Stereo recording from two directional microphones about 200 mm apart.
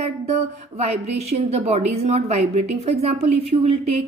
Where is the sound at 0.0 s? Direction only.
30° right (ahead or behind).